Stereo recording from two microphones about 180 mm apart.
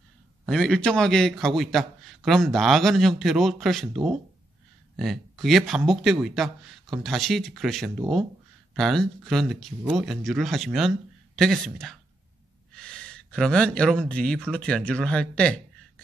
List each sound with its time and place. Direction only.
0.5 s a man's voice: 5° left (ahead or behind)